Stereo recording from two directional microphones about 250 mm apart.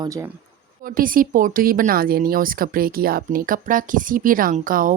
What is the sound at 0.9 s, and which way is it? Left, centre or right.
Speech, right.